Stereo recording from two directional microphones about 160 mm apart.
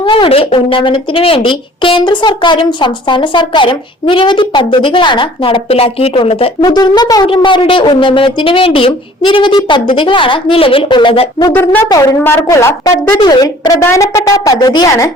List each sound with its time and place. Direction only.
0.0 s a woman's voice: 30° left (ahead or behind)
6.6 s a woman's voice: 25° left (ahead or behind)
11.4 s a woman's voice: 15° left (ahead or behind)